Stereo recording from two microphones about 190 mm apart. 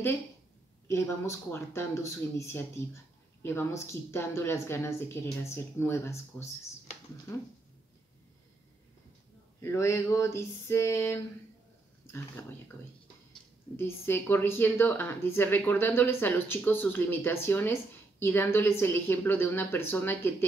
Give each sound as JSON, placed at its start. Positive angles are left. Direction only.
{"t": 0.8, "sound": "speech", "side_deg": 15}
{"t": 9.6, "sound": "speech", "side_deg": 15}
{"t": 12.4, "sound": "speech", "side_deg": 15}
{"t": 13.7, "sound": "speech", "side_deg": 10}